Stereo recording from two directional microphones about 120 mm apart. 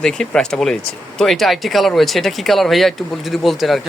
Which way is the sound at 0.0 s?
5° left (ahead or behind).